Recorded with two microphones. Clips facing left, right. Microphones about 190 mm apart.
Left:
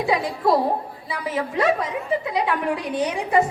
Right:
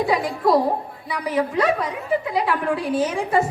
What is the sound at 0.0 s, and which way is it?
A woman's voice, 20° left (ahead or behind).